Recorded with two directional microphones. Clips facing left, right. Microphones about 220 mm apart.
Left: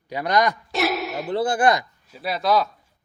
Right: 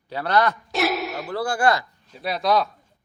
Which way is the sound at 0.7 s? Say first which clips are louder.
Even; centre (ahead or behind).